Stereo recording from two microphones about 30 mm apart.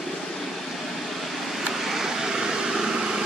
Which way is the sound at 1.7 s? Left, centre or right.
Centre.